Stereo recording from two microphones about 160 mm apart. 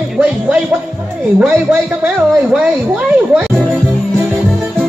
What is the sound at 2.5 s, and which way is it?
Speech, 10° right (ahead or behind).